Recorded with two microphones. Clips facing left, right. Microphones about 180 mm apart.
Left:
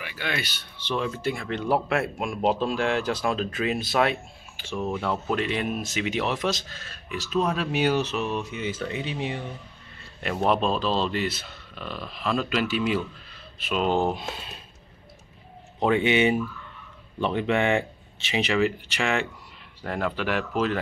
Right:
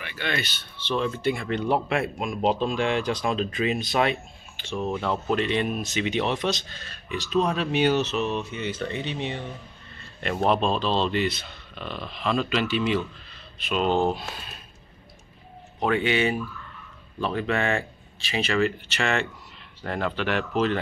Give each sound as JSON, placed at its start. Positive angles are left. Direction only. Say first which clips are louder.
{"t": 0.0, "sound": "speech", "louder": "right 1 dB", "side_deg": 5}
{"t": 15.8, "sound": "speech", "louder": "left 2 dB", "side_deg": 20}